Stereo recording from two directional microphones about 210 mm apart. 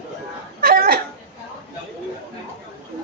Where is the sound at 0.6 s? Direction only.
45° right (ahead or behind).